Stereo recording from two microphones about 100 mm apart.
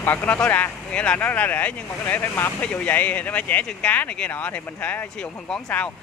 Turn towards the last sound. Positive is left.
turn(degrees=15)  # may be behind; listen again after turning